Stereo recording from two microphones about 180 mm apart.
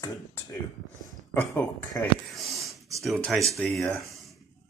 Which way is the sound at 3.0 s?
Centre (ahead or behind).